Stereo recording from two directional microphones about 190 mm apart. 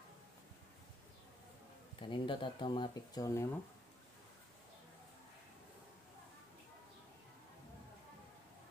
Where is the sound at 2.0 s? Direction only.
25° left (ahead or behind).